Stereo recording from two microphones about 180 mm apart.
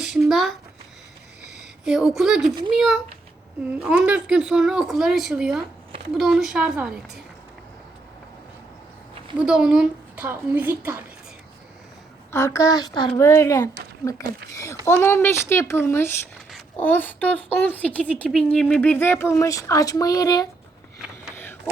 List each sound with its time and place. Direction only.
0.0 s a sound: centre (ahead or behind)
1.8 s speech: centre (ahead or behind)
9.4 s a woman's voice: 5° right (ahead or behind)
12.3 s a child's voice: 15° left (ahead or behind)